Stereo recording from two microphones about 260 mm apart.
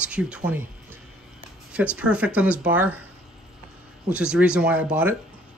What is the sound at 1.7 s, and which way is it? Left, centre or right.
Speech, centre.